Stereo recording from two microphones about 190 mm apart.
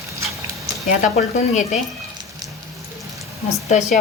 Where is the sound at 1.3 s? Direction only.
35° left (ahead or behind).